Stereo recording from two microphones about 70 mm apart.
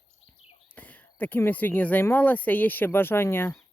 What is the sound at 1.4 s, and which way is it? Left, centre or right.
Speech, left.